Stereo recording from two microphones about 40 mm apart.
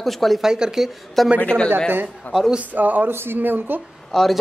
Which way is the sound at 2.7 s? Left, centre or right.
Right.